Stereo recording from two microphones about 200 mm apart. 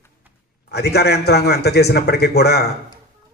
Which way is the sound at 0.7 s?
55° left (ahead or behind).